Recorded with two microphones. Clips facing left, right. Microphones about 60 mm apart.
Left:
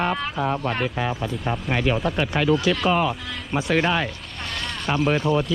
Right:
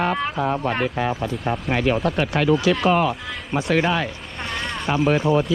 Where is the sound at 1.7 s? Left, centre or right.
Right.